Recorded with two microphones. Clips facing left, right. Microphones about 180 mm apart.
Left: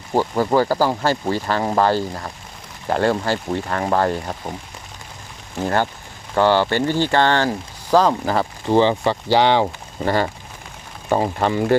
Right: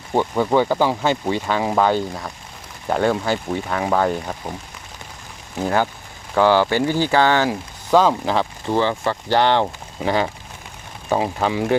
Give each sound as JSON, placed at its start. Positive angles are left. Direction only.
{"t": 0.1, "sound": "speech", "side_deg": 5}
{"t": 5.5, "sound": "speech", "side_deg": -5}
{"t": 8.7, "sound": "speech", "side_deg": 20}
{"t": 10.0, "sound": "speech", "side_deg": 0}